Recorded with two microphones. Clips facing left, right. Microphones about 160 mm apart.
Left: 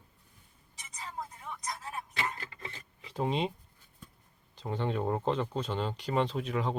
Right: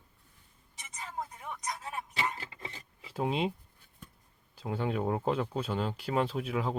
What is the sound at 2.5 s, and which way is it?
Filing, 25° right (ahead or behind).